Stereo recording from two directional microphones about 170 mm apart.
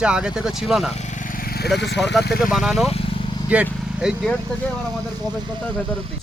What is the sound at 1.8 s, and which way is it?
Speech, 90° left.